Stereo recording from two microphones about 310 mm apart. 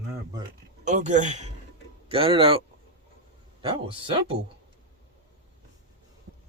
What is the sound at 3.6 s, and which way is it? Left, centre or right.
Speech, centre.